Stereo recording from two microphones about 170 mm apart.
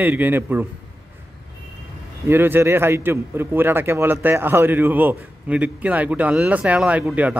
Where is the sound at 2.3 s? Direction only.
10° right (ahead or behind).